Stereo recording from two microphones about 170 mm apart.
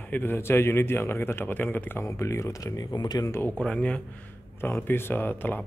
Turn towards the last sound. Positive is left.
turn(degrees=10)  # may be behind; listen again after turning